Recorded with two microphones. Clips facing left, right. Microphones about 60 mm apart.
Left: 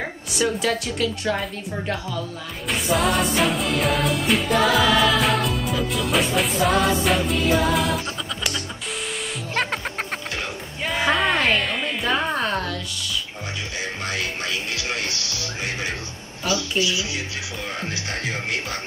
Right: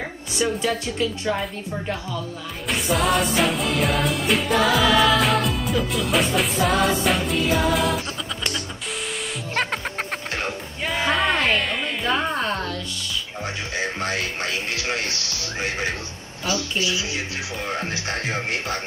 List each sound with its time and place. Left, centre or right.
0.6 s a woman's voice: right
2.7 s music: centre
10.8 s music: centre
13.7 s music: right
16.4 s music: right